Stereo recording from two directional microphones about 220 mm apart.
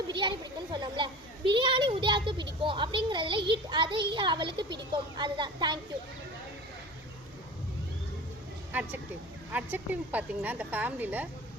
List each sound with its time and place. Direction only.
0.1 s a child's voice: 20° right (ahead or behind)
8.7 s a woman's voice: 5° right (ahead or behind)